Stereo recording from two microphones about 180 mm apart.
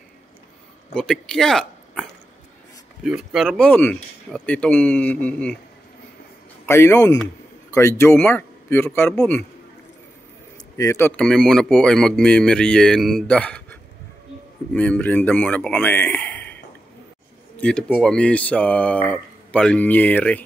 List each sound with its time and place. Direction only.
0.9 s speech: 5° left (ahead or behind)
6.6 s speech: 15° left (ahead or behind)
9.1 s speech: centre (ahead or behind)
10.8 s speech: 15° left (ahead or behind)
17.6 s speech: 5° left (ahead or behind)